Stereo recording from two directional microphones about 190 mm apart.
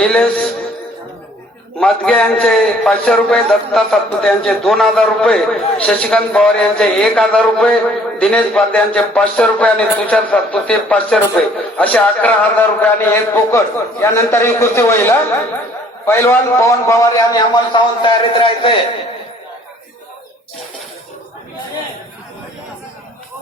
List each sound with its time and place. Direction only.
0.0 s a man's voice: 5° left (ahead or behind)
1.8 s a man's voice: 5° left (ahead or behind); by 18.7 s 25° left (ahead or behind)